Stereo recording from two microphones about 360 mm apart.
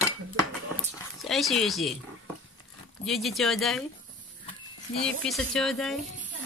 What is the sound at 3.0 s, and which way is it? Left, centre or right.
Speech, centre.